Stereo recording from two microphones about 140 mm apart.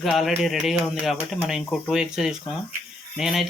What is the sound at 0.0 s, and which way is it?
Speech, centre (ahead or behind).